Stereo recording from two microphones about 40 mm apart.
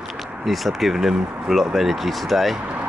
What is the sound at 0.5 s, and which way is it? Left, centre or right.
Speech, centre.